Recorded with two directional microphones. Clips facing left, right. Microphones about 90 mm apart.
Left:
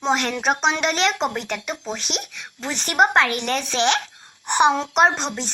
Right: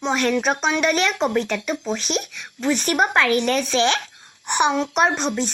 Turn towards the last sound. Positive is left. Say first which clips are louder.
# even
turn(degrees=25)  # may be behind; listen again after turning